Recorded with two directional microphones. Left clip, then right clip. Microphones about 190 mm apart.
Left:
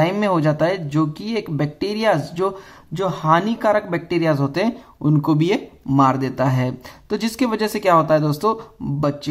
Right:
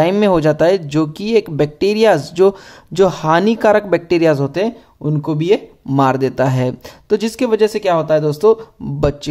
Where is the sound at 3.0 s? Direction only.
45° right (ahead or behind).